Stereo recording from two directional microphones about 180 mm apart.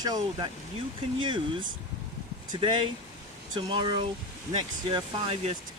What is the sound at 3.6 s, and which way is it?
Speech, 25° right (ahead or behind).